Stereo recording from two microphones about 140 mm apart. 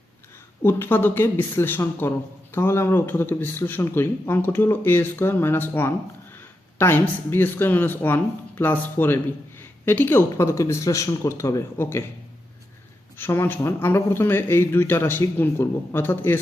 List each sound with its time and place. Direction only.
0.6 s speech: 15° left (ahead or behind)
13.1 s speech: 15° left (ahead or behind)